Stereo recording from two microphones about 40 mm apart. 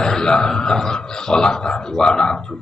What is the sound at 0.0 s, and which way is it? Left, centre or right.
A man's voice, centre.